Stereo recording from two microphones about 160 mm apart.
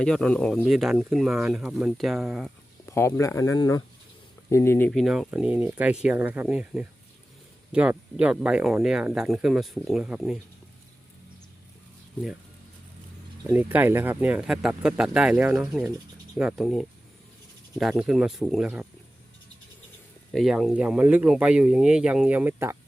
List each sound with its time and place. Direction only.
0.0 s speech: 5° left (ahead or behind)
2.8 s speech: 15° left (ahead or behind)
4.9 s speech: centre (ahead or behind)
13.5 s speech: 10° right (ahead or behind)
20.3 s speech: centre (ahead or behind)